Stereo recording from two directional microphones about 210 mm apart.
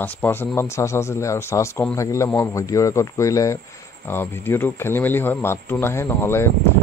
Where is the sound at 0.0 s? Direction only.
10° left (ahead or behind).